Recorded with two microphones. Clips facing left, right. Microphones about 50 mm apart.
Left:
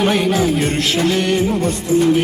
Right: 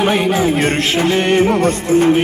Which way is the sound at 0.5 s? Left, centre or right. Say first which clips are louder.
Right 2 dB; right.